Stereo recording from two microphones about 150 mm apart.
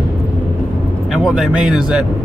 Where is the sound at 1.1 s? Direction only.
Centre (ahead or behind).